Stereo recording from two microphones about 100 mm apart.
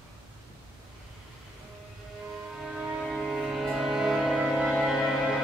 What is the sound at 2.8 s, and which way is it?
Music, 5° left (ahead or behind).